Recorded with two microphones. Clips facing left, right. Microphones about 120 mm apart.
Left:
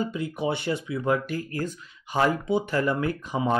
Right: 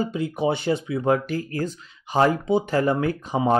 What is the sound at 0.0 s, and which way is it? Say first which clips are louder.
Speech: right 4 dB; 25° right (ahead or behind).